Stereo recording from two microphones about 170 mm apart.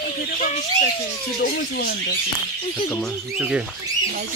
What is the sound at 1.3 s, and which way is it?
Speech, 70° left (ahead or behind).